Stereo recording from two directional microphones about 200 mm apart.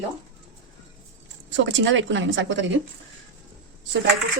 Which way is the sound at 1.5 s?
65° right (ahead or behind).